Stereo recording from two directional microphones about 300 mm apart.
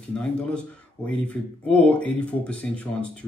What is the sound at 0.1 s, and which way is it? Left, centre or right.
Speech, centre.